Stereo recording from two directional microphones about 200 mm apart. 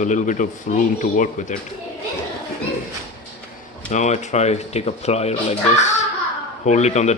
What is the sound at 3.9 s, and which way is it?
Speech, 35° left (ahead or behind).